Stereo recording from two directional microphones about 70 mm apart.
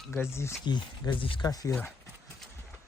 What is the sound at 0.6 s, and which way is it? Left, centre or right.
Speech, left.